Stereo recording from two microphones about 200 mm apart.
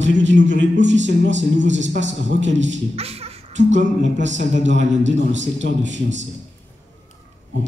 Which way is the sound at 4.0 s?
65° right (ahead or behind).